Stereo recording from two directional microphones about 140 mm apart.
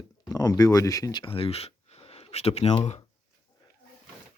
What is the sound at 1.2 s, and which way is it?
Speech, 40° left (ahead or behind).